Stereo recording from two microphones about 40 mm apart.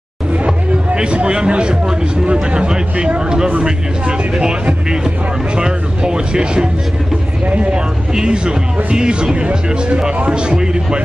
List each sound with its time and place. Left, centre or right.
0.5 s speech: right
5.6 s speech: right
7.4 s speech: right
7.7 s speech: right